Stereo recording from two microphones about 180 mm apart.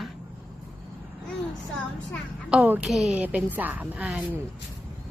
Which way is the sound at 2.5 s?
5° right (ahead or behind).